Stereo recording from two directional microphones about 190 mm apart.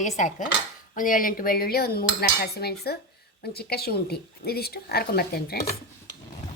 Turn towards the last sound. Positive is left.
turn(degrees=55)  # may be behind; listen again after turning